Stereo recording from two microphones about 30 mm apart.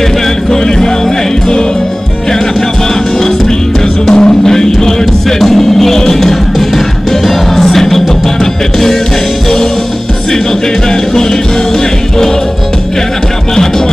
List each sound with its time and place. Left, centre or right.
4.1 s music: left
4.5 s music: centre